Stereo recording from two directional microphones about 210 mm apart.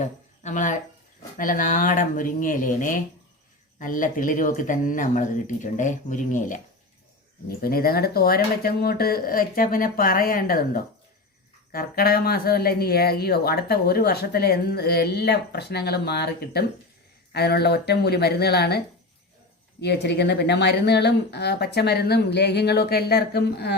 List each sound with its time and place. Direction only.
0.0 s speech: 35° left (ahead or behind)
19.8 s speech: 55° left (ahead or behind)